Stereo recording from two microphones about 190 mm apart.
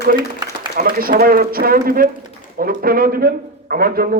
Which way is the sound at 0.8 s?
50° right (ahead or behind).